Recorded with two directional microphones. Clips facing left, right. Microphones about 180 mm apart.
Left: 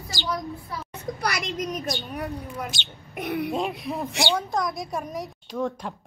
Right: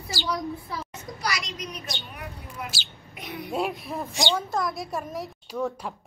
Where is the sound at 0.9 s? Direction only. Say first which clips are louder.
Left 5 dB; 60° left (ahead or behind).